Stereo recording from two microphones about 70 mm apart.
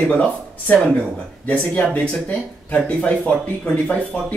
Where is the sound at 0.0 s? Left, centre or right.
Centre.